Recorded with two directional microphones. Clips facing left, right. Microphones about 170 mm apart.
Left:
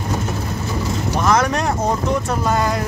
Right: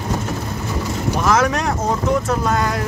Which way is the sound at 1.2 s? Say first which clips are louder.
Even; centre (ahead or behind).